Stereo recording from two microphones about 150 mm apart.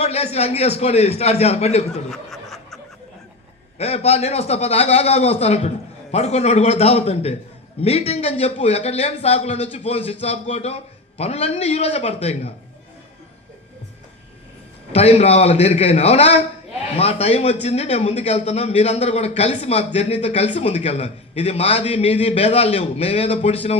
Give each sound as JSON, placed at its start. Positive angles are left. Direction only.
{"t": 0.0, "sound": "speech", "side_deg": 45}
{"t": 2.0, "sound": "snicker", "side_deg": 0}
{"t": 3.8, "sound": "speech", "side_deg": 45}
{"t": 14.9, "sound": "speech", "side_deg": 45}